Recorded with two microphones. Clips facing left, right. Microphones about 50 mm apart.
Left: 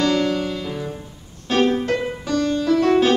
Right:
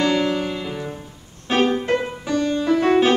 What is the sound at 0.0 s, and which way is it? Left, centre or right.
Music, centre.